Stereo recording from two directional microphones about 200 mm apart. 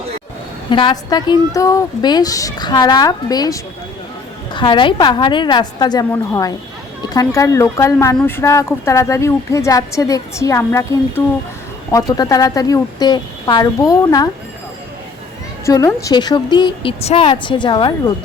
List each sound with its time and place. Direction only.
0.7 s speech: 25° left (ahead or behind)
15.6 s speech: 15° left (ahead or behind)